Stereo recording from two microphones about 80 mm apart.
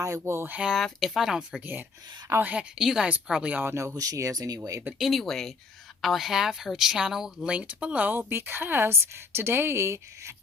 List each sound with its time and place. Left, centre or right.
0.0 s speech: right
0.7 s speech: centre
2.4 s speech: centre
2.7 s speech: centre
3.5 s speech: right
3.8 s speech: right
4.9 s speech: centre; by 10.3 s right